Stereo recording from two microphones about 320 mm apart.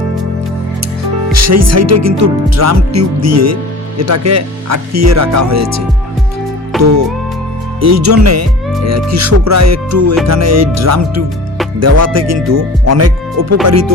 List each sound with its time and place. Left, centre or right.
1.3 s speech: right
6.7 s music: centre
7.8 s speech: right